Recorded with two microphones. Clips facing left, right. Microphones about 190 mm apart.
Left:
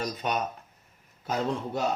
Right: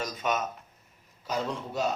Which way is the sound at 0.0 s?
35° left (ahead or behind).